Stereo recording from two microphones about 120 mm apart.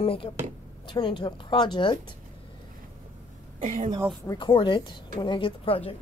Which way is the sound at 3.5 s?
90° right.